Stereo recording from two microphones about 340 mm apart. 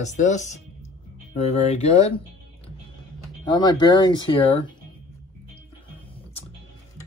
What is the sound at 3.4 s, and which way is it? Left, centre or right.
Speech, centre.